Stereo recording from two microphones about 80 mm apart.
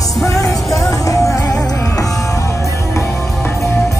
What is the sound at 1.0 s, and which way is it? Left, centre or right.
Music, left.